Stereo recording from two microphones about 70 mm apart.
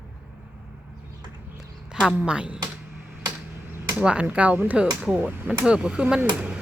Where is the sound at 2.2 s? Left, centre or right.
Centre.